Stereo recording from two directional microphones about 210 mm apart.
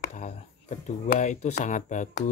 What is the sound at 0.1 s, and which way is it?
Speech, 35° left (ahead or behind).